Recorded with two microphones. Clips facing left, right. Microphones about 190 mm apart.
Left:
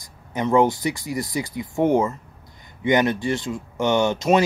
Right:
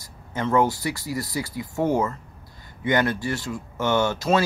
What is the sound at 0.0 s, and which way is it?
Speech, 15° left (ahead or behind).